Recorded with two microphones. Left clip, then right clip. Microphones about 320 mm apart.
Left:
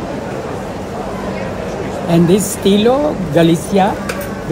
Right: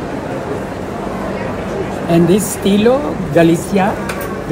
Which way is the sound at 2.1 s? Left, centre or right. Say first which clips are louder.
Even; left.